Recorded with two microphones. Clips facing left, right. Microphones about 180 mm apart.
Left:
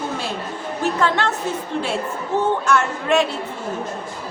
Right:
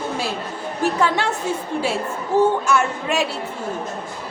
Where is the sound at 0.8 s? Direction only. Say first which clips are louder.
Even; 10° right (ahead or behind).